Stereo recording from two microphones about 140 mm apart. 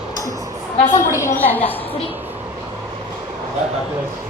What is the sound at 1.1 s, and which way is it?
Speech, 20° left (ahead or behind).